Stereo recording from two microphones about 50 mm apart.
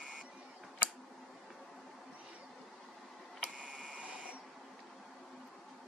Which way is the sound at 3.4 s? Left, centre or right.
Right.